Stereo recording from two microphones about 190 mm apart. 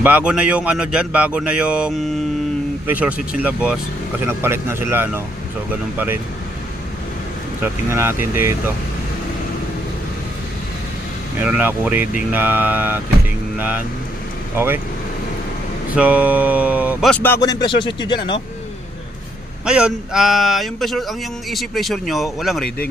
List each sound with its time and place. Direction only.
0.0 s speech: 10° right (ahead or behind)
7.6 s speech: 15° right (ahead or behind)
11.3 s speech: 10° right (ahead or behind)
16.0 s speech: 10° right (ahead or behind)
17.1 s speech: 10° left (ahead or behind)
19.6 s speech: 5° right (ahead or behind)